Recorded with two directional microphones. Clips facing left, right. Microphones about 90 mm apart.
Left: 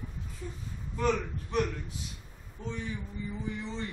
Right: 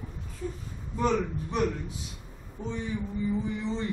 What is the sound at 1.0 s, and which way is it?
Speech, 20° right (ahead or behind).